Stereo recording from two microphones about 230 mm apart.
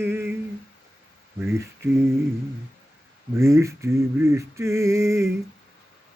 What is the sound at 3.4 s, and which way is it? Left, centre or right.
Male singing, centre.